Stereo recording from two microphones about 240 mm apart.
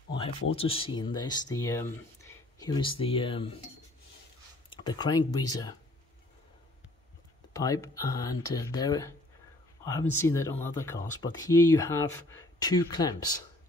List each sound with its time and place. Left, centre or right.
0.6 s speech: left
4.6 s speech: centre
7.5 s speech: centre